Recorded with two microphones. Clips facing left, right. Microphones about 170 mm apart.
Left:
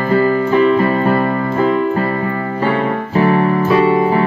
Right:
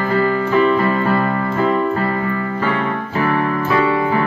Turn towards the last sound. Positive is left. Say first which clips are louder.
# left 4 dB
turn(degrees=30)  # may be behind; listen again after turning